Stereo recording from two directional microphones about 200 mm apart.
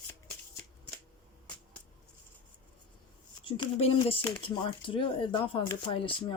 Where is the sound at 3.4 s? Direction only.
25° left (ahead or behind).